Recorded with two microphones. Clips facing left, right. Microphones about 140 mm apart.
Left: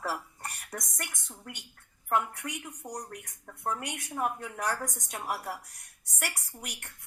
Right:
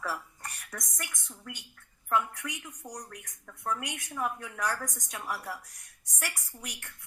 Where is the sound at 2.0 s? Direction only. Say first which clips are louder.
Even; 50° left (ahead or behind).